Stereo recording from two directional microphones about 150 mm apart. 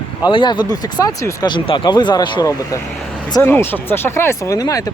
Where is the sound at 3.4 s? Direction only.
15° left (ahead or behind).